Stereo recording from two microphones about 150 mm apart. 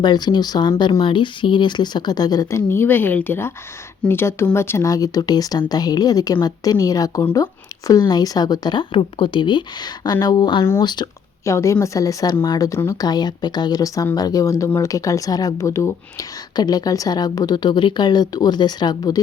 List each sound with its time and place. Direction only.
0.0 s speech: 30° left (ahead or behind)